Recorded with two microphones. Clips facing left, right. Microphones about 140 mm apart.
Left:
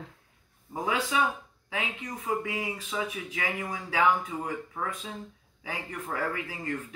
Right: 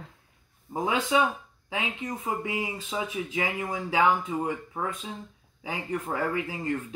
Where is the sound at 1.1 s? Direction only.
25° right (ahead or behind).